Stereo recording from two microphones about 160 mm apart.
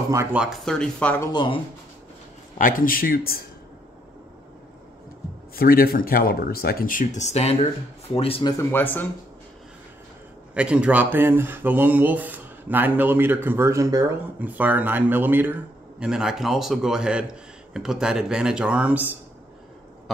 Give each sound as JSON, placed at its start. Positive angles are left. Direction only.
{"t": 0.1, "sound": "speech", "side_deg": -15}
{"t": 0.4, "sound": "a man's voice", "side_deg": 0}
{"t": 1.2, "sound": "speech", "side_deg": 30}
{"t": 2.6, "sound": "speech", "side_deg": 60}
{"t": 5.6, "sound": "speech", "side_deg": 70}
{"t": 8.5, "sound": "speech", "side_deg": 10}
{"t": 10.5, "sound": "a man's voice", "side_deg": -5}